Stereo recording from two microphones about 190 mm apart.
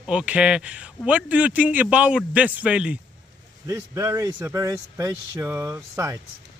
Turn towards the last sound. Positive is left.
turn(degrees=-15)  # may be behind; listen again after turning